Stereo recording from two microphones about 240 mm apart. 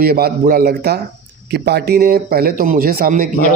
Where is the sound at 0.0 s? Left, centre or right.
Right.